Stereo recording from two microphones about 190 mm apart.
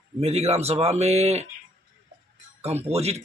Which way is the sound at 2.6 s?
35° right (ahead or behind).